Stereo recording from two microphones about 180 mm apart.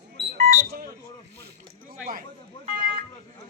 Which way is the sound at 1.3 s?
65° right (ahead or behind).